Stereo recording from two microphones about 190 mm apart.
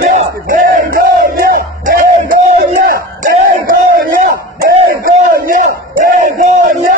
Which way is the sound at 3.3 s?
45° right (ahead or behind).